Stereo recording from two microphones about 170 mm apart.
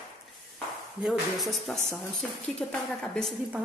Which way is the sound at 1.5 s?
Centre (ahead or behind).